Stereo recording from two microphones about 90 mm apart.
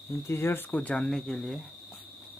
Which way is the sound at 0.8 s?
10° left (ahead or behind).